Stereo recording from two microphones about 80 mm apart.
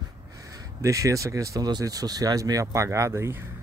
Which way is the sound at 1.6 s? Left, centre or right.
Right.